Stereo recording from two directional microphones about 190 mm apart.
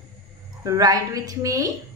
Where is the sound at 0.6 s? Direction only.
20° right (ahead or behind).